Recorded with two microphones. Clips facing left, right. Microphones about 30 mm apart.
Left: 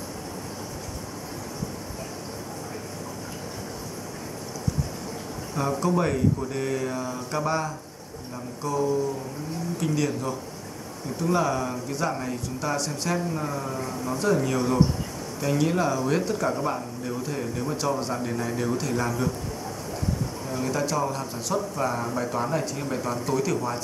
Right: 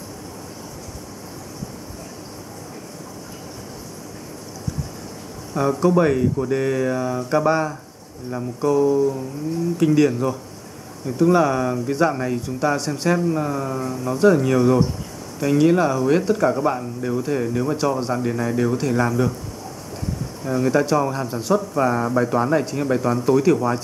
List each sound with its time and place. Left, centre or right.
5.5 s speech: centre
20.4 s speech: centre